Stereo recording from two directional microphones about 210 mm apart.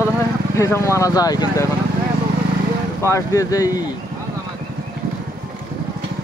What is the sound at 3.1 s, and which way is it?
Speech, 15° left (ahead or behind).